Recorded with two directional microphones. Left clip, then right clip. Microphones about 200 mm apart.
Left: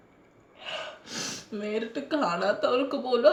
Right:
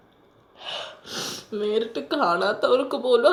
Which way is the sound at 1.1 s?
20° left (ahead or behind).